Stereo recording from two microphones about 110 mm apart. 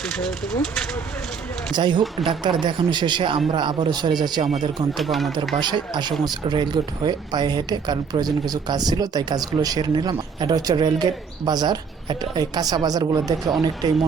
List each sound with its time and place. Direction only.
0.0 s speech: 5° left (ahead or behind)
1.7 s a man's voice: 45° right (ahead or behind)
4.9 s speech: centre (ahead or behind)
5.5 s speech: 45° right (ahead or behind)